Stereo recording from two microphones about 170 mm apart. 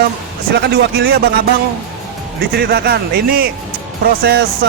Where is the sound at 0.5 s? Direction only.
80° right.